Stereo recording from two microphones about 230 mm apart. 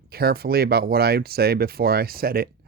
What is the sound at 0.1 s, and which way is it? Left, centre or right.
Speech, right.